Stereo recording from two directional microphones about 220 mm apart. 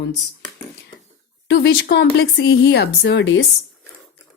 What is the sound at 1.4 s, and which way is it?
Speech, 50° left (ahead or behind).